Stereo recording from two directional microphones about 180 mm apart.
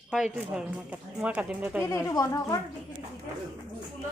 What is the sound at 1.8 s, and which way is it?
Speech, 15° left (ahead or behind).